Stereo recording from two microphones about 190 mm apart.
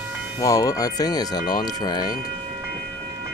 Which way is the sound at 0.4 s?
20° left (ahead or behind).